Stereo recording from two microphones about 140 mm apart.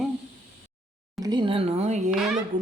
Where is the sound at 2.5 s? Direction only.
70° right (ahead or behind).